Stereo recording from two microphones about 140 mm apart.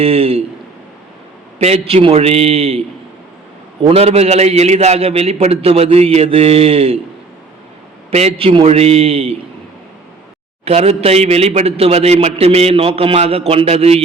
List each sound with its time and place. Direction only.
0.0 s a man's voice: 45° right (ahead or behind)
1.5 s a man's voice: 50° right (ahead or behind)
3.8 s a man's voice: 45° right (ahead or behind)
8.1 s a man's voice: 45° right (ahead or behind)
10.7 s a man's voice: 50° right (ahead or behind)